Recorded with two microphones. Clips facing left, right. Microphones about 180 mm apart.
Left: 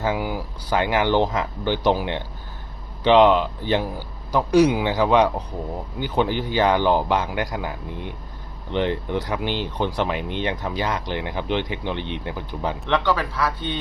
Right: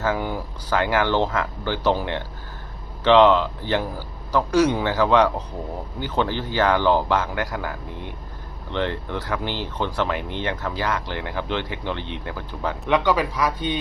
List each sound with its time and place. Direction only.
0.0 s speech: 10° left (ahead or behind)
12.9 s speech: 15° right (ahead or behind)